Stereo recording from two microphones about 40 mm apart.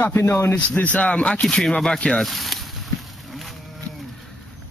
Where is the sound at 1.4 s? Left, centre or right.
Centre.